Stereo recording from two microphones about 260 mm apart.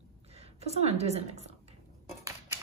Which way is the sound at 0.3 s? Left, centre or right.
Right.